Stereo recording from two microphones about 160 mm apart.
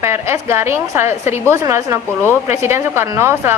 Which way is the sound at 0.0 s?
15° right (ahead or behind).